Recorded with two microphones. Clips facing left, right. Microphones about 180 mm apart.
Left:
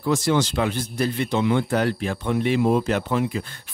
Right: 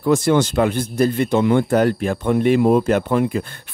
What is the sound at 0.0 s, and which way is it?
Speech, 55° right (ahead or behind).